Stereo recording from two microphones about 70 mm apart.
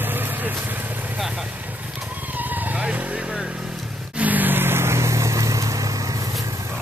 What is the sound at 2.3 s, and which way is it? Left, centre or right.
Vehicle, right.